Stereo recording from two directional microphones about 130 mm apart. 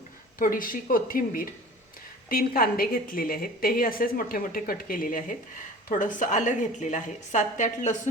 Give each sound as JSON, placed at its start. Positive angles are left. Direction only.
{"t": 0.3, "sound": "a woman's voice", "side_deg": 90}